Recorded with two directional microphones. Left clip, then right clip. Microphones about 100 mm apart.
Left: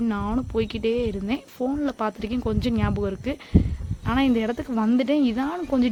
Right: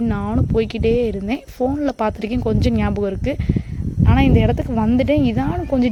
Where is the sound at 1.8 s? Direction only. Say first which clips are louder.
Right 6 dB; 55° right (ahead or behind).